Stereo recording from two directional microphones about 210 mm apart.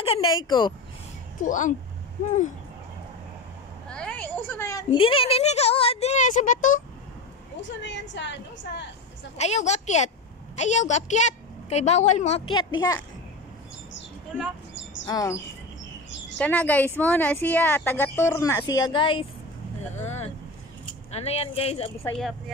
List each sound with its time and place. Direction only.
0.0 s speech: 25° left (ahead or behind)
1.4 s a woman's voice: 35° left (ahead or behind)
3.9 s a woman's voice: 5° left (ahead or behind)
4.9 s a woman's voice: 25° left (ahead or behind)
7.6 s a woman's voice: 60° left (ahead or behind)
9.4 s a woman's voice: 30° left (ahead or behind)
14.7 s a sound: 60° left (ahead or behind)
15.0 s a woman's voice: 15° left (ahead or behind)
16.3 s a woman's voice: 5° left (ahead or behind); by 21.9 s 30° left (ahead or behind)